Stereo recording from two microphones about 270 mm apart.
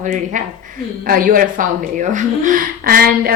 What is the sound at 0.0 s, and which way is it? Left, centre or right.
Speech, right.